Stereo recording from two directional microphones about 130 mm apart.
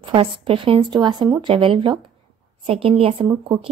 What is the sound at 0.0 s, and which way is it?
A woman's voice, 40° right (ahead or behind).